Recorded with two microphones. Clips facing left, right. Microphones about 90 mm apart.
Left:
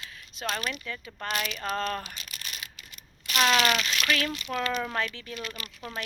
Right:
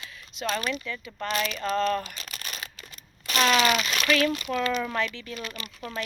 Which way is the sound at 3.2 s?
40° right (ahead or behind).